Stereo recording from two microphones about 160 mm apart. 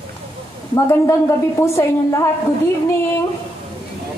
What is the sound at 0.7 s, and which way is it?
Speech, 20° left (ahead or behind).